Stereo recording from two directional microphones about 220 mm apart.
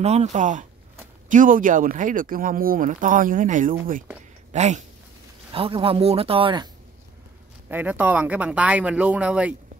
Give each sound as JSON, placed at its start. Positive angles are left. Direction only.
{"t": 0.0, "sound": "a man's voice", "side_deg": -30}
{"t": 7.6, "sound": "speech", "side_deg": -10}